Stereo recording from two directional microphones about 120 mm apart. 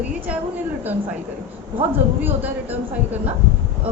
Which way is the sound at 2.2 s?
15° right (ahead or behind).